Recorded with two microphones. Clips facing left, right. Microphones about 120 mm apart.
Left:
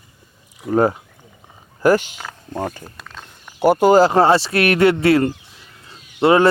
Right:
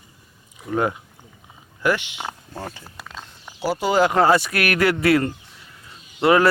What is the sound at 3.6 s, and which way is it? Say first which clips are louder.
Speech: left 8 dB; 55° left (ahead or behind).